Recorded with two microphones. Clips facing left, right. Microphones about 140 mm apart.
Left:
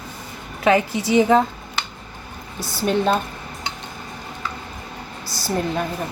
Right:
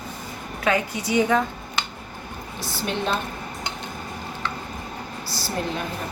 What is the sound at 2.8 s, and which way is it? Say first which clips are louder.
Speech: left 7 dB; 45° left (ahead or behind).